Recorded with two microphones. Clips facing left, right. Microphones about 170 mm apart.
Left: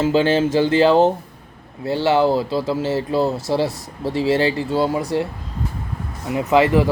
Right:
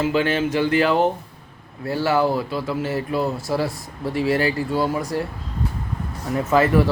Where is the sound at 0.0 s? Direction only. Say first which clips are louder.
Left 4 dB; 30° left (ahead or behind).